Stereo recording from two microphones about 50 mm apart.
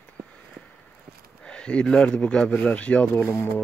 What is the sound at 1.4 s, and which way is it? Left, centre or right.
Speech, centre.